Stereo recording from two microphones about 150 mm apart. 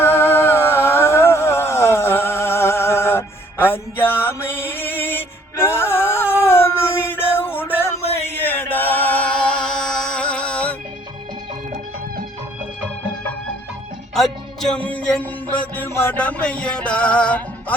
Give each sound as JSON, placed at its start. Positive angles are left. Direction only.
{"t": 0.0, "sound": "a sound", "side_deg": 15}
{"t": 8.3, "sound": "music", "side_deg": 15}
{"t": 14.1, "sound": "music", "side_deg": 0}